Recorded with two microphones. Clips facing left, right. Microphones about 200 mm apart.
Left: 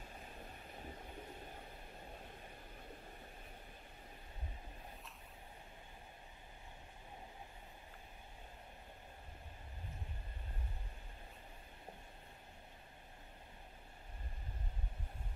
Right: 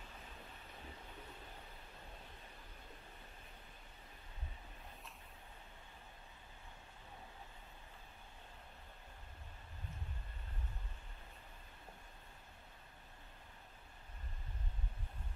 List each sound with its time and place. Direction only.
0.1 s vehicle: 40° left (ahead or behind)